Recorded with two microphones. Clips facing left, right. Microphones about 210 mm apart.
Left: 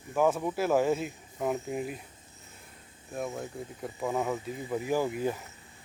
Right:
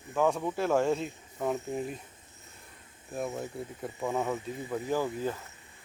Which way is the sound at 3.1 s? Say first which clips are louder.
Right 1 dB; centre (ahead or behind).